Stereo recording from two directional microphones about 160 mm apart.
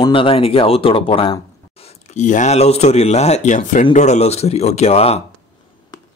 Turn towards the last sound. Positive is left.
turn(degrees=40)  # may be behind; listen again after turning